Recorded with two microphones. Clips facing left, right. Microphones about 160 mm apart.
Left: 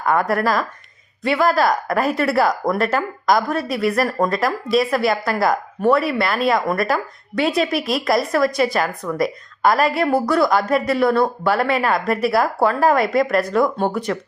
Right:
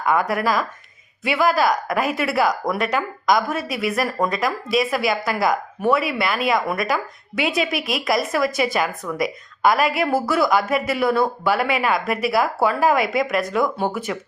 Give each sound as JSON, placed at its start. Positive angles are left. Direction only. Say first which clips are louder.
{"t": 0.1, "sound": "speech", "louder": "left 2 dB", "side_deg": 0}